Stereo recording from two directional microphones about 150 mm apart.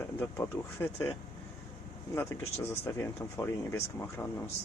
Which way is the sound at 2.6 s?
20° left (ahead or behind).